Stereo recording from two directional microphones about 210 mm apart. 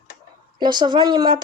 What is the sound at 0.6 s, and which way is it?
Speech, 20° right (ahead or behind).